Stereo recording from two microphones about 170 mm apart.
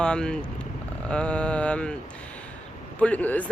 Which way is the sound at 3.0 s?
10° left (ahead or behind).